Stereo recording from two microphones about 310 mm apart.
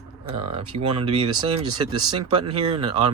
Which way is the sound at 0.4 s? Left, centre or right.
Centre.